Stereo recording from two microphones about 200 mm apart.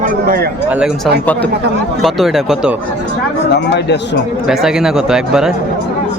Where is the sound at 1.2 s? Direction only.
5° left (ahead or behind).